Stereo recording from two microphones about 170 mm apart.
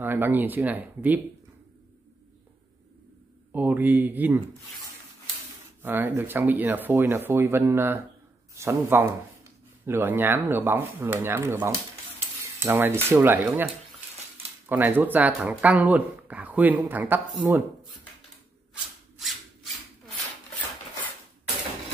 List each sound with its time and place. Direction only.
0.0 s speech: 10° right (ahead or behind)
3.5 s speech: 10° right (ahead or behind)
5.8 s speech: 10° right (ahead or behind)
14.7 s speech: 10° right (ahead or behind)